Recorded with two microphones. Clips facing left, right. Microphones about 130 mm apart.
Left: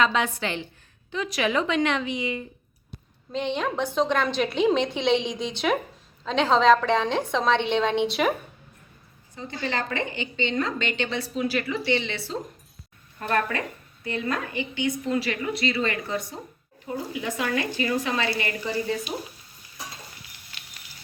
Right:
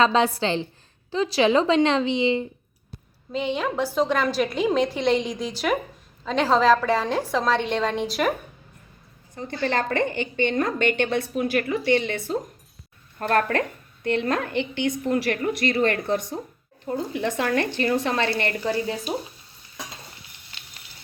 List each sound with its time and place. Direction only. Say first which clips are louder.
0.0 s a woman's voice: right 4 dB; 30° right (ahead or behind)
3.3 s a woman's voice: right 2 dB; 5° right (ahead or behind)
9.3 s a woman's voice: right 5 dB; 55° right (ahead or behind)